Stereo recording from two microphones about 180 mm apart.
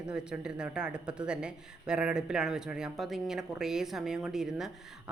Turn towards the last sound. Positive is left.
turn(degrees=0)  # may be behind; listen again after turning